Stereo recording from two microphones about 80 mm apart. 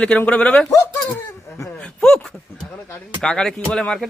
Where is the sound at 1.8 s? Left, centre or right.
Centre.